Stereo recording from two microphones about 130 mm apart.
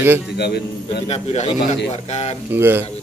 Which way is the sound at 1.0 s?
55° left (ahead or behind).